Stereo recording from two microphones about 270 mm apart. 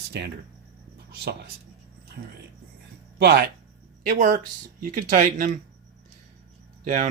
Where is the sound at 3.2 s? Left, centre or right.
Right.